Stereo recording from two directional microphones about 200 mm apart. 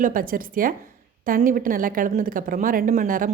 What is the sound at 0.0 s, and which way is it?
A woman's voice, 45° right (ahead or behind).